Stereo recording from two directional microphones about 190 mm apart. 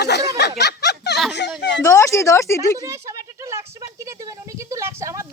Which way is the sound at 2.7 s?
15° right (ahead or behind).